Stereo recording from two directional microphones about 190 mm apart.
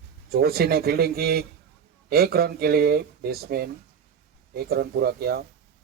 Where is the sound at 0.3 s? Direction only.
55° right (ahead or behind).